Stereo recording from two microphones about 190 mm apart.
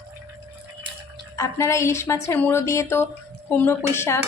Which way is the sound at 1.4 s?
15° left (ahead or behind).